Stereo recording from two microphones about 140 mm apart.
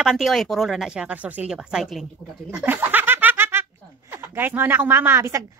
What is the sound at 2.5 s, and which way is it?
Snicker, 10° right (ahead or behind).